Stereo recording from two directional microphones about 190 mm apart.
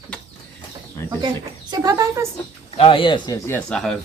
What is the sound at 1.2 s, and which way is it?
Speech, 20° right (ahead or behind).